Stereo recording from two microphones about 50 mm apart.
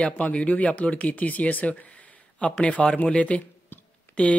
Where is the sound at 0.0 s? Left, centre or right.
Left.